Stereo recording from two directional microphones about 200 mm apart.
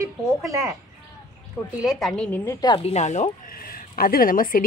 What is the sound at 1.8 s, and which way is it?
A woman's voice, centre (ahead or behind).